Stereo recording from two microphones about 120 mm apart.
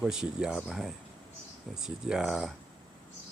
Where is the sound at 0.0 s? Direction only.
5° right (ahead or behind).